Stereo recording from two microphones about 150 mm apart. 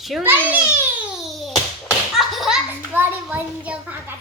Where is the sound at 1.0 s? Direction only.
Centre (ahead or behind).